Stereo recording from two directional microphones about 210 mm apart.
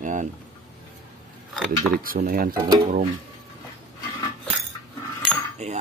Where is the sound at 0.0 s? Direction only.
35° right (ahead or behind).